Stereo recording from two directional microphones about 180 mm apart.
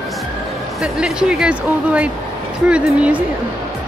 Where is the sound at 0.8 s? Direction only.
5° right (ahead or behind).